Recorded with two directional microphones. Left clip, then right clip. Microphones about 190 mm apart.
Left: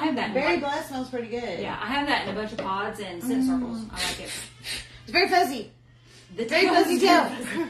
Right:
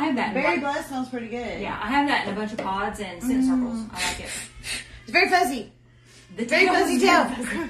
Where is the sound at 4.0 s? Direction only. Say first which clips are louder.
Right 1 dB; 15° right (ahead or behind).